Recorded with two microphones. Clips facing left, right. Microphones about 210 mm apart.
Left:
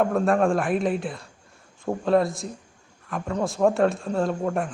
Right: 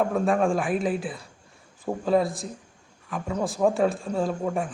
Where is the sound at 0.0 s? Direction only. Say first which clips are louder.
Left 2 dB; centre (ahead or behind).